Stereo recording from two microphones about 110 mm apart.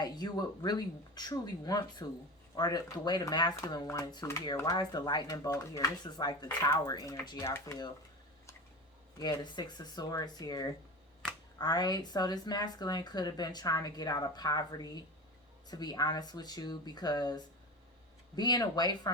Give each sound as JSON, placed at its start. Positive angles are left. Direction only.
{"t": 0.0, "sound": "a woman's voice", "side_deg": 40}
{"t": 6.1, "sound": "a woman's voice", "side_deg": 40}
{"t": 7.4, "sound": "speech", "side_deg": 25}
{"t": 9.1, "sound": "a woman's voice", "side_deg": 40}